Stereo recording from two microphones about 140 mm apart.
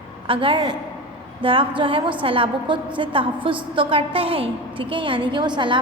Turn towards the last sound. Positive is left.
turn(degrees=-35)  # may be behind; listen again after turning